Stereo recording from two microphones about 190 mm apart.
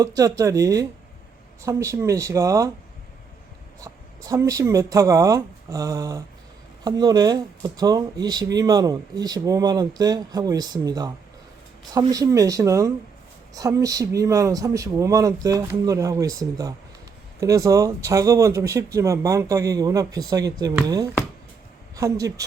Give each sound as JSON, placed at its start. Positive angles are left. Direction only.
{"t": 0.0, "sound": "speech", "side_deg": -20}
{"t": 3.8, "sound": "speech", "side_deg": -20}